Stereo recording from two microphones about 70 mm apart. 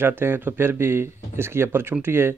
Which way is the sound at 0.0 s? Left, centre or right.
Right.